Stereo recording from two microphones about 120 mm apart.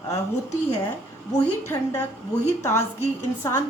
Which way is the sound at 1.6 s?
20° left (ahead or behind).